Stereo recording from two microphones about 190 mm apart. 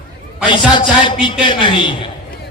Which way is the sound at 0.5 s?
25° left (ahead or behind).